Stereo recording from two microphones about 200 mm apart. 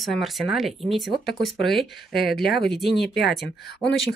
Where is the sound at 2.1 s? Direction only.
50° left (ahead or behind).